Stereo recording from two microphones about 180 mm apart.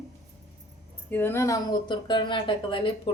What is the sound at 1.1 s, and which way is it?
Speech, 10° left (ahead or behind).